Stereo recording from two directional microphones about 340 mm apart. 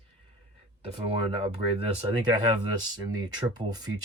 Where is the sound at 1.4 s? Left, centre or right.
Centre.